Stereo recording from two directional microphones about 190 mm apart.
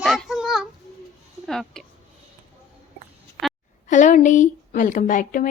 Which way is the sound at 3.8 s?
40° left (ahead or behind).